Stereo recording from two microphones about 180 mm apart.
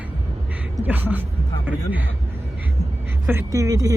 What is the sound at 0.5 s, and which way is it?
Speech, 10° right (ahead or behind).